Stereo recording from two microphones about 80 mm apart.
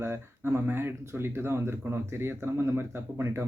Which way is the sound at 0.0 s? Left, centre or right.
Right.